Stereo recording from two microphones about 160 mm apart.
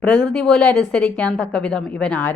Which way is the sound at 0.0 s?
5° left (ahead or behind).